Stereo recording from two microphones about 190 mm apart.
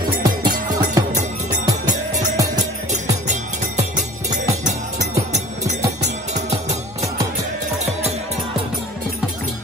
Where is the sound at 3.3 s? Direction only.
40° right (ahead or behind).